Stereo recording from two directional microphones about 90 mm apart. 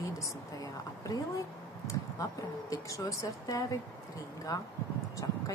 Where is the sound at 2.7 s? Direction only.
40° left (ahead or behind).